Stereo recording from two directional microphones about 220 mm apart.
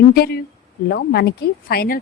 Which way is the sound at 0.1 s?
45° left (ahead or behind).